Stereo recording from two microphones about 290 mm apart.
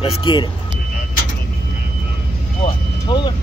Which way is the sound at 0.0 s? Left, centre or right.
Centre.